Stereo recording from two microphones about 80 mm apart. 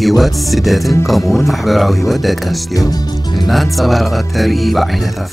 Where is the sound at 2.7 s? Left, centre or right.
Left.